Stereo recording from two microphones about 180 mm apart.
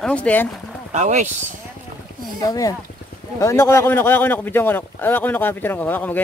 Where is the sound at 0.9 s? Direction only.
40° right (ahead or behind).